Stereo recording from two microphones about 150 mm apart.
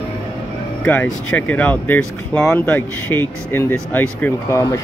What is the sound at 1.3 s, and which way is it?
Speech, 10° left (ahead or behind).